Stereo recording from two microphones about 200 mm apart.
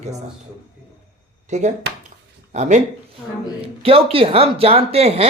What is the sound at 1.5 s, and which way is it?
A man's voice, 35° right (ahead or behind).